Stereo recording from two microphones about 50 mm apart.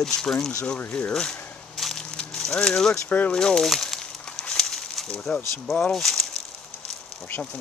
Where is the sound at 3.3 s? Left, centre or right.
Centre.